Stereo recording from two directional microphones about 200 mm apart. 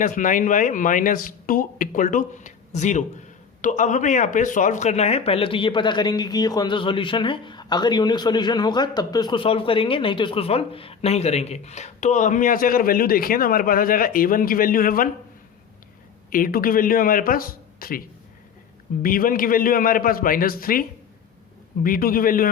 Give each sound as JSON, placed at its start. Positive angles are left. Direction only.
{"t": 0.0, "sound": "a man's voice", "side_deg": 40}
{"t": 16.3, "sound": "a man's voice", "side_deg": 45}
{"t": 19.0, "sound": "a man's voice", "side_deg": 45}
{"t": 21.8, "sound": "a man's voice", "side_deg": 45}